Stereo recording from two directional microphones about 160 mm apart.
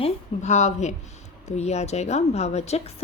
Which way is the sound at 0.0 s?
45° left (ahead or behind).